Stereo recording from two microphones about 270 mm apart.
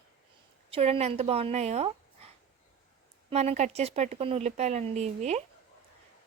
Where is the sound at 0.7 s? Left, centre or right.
Right.